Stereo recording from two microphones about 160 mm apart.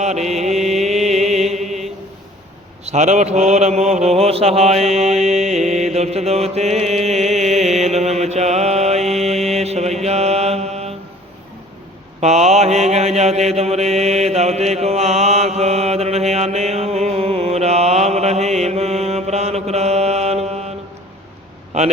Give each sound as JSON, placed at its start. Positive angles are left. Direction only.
{"t": 0.0, "sound": "mantra", "side_deg": -45}
{"t": 1.1, "sound": "music", "side_deg": -45}
{"t": 1.5, "sound": "mantra", "side_deg": 0}
{"t": 2.8, "sound": "mantra", "side_deg": -45}
{"t": 12.2, "sound": "mantra", "side_deg": -45}
{"t": 21.7, "sound": "a man's voice", "side_deg": -45}